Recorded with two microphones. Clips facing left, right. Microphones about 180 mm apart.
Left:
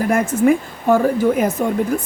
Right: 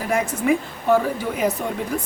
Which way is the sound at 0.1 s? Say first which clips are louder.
Left 4 dB; 45° left (ahead or behind).